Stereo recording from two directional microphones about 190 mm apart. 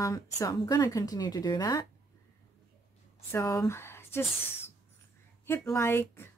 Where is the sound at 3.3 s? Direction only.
15° left (ahead or behind).